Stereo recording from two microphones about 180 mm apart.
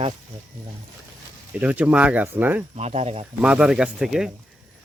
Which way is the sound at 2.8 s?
35° right (ahead or behind).